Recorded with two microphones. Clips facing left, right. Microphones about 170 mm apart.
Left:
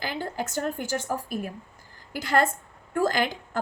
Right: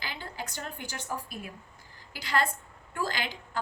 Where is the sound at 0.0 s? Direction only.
50° left (ahead or behind).